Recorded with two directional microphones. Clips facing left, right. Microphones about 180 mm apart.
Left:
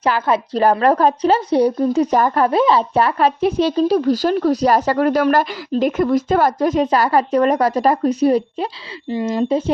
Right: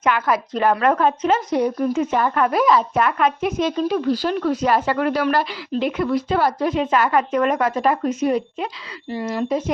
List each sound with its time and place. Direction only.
0.0 s a woman's voice: 30° left (ahead or behind)
9.0 s speech: 20° left (ahead or behind)